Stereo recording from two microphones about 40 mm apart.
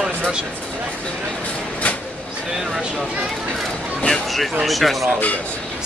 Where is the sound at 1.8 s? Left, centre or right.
Left.